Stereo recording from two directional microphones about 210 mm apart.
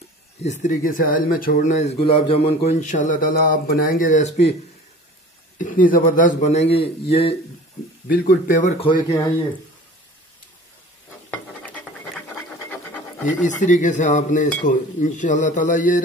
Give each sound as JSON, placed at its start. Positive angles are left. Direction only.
{"t": 0.4, "sound": "speech", "side_deg": 35}
{"t": 5.6, "sound": "speech", "side_deg": 40}
{"t": 8.1, "sound": "speech", "side_deg": 40}
{"t": 8.8, "sound": "speech", "side_deg": 20}
{"t": 11.2, "sound": "a sound", "side_deg": 5}
{"t": 13.6, "sound": "speech", "side_deg": 35}